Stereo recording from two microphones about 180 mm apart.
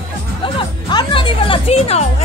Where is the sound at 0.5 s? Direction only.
25° left (ahead or behind).